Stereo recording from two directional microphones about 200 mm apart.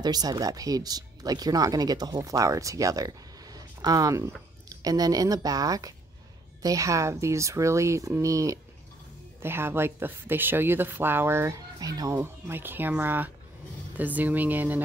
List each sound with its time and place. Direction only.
0.0 s speech: 20° right (ahead or behind)